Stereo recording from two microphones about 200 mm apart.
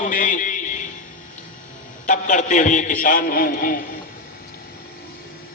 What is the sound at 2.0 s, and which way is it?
A man's voice, 40° left (ahead or behind).